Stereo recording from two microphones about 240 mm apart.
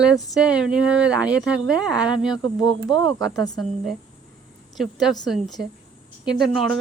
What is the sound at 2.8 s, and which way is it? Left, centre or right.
Speech, centre.